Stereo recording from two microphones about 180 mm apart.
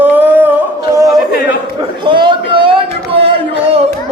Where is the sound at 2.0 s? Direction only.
25° right (ahead or behind).